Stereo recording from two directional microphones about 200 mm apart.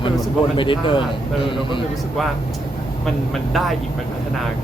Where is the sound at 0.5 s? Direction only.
25° left (ahead or behind).